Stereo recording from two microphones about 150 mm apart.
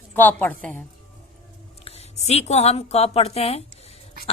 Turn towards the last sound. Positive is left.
turn(degrees=40)  # may be behind; listen again after turning